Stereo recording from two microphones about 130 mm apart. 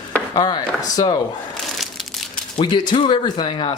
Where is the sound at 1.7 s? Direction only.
Centre (ahead or behind).